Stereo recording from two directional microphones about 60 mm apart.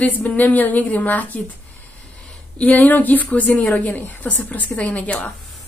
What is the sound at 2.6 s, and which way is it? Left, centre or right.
A woman's voice, left.